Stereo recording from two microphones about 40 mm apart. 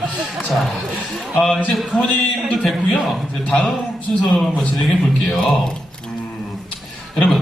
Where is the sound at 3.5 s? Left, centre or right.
Left.